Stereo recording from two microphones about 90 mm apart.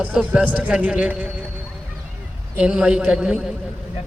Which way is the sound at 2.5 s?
10° right (ahead or behind).